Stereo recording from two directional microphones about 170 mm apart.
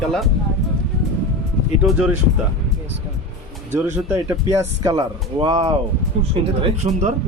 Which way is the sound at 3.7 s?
15° right (ahead or behind).